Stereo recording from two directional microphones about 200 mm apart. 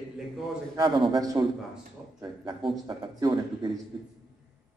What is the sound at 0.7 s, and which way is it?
Speech, 20° right (ahead or behind).